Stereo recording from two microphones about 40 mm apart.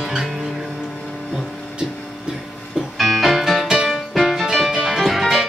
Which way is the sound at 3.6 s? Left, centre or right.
Centre.